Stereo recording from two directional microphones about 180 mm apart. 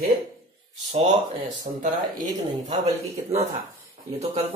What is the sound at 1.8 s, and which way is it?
Speech, 45° right (ahead or behind).